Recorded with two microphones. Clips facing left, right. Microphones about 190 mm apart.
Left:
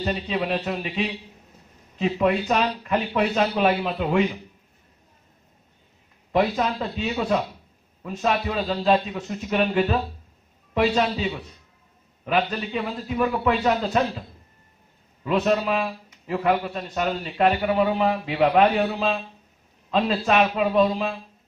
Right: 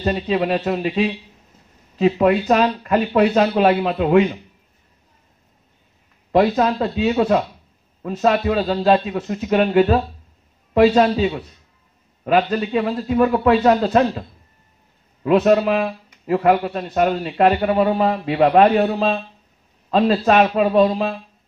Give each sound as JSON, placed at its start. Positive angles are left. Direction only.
{"t": 0.0, "sound": "speech", "side_deg": -50}
{"t": 6.3, "sound": "speech", "side_deg": -55}
{"t": 15.2, "sound": "speech", "side_deg": -50}